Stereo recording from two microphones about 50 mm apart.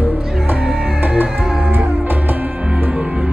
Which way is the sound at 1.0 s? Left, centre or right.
Right.